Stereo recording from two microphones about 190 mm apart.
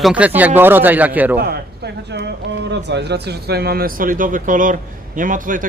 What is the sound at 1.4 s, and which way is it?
Speech, 60° right (ahead or behind).